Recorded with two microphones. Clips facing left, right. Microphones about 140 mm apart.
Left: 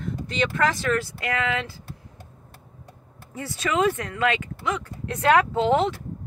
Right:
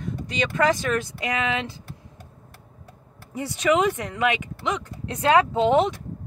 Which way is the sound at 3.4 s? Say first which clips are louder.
Right 3 dB; 15° right (ahead or behind).